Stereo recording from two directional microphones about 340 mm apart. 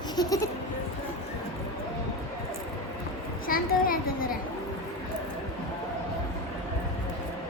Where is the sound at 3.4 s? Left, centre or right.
Left.